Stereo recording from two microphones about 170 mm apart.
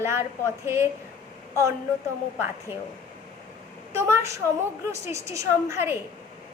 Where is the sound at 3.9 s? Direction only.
15° right (ahead or behind).